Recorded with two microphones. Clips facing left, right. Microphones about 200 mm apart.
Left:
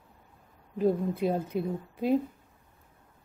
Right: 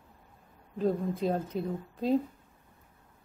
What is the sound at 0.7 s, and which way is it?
A woman's voice, 10° left (ahead or behind).